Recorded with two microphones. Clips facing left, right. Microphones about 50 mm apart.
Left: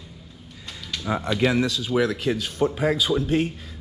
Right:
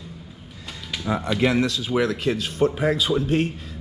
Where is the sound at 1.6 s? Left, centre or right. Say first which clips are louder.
Even; right.